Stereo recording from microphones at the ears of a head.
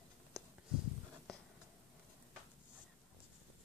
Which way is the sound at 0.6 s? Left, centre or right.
Left.